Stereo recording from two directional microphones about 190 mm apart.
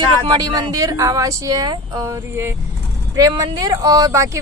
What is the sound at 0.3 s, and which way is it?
A woman's voice, 20° right (ahead or behind).